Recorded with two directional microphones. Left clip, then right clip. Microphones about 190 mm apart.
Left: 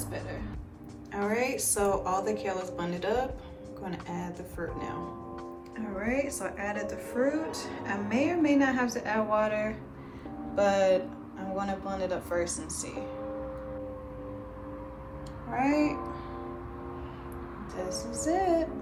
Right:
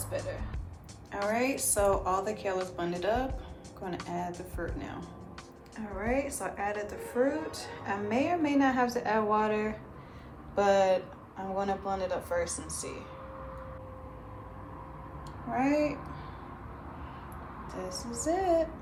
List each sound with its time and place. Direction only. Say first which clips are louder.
1.1 s a woman's voice: even; 15° right (ahead or behind)
6.0 s a woman's voice: even; 10° right (ahead or behind)
15.5 s a woman's voice: left 1 dB; 10° right (ahead or behind)
17.7 s a woman's voice: left 4 dB; 10° right (ahead or behind)